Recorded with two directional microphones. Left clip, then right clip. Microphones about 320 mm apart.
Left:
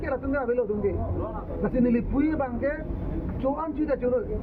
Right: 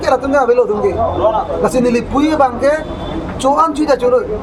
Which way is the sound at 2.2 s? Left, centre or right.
Centre.